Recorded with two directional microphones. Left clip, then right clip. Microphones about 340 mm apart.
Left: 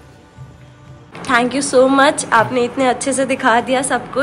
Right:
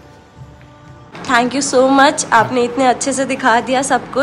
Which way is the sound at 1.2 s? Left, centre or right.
Centre.